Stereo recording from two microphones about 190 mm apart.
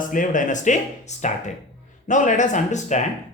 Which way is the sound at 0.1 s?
45° left (ahead or behind).